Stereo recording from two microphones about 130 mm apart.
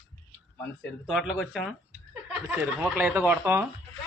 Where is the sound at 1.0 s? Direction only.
Centre (ahead or behind).